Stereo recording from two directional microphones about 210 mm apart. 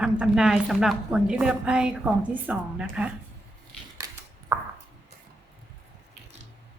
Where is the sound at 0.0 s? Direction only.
5° right (ahead or behind).